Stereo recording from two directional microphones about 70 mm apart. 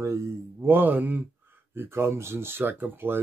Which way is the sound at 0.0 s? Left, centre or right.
Right.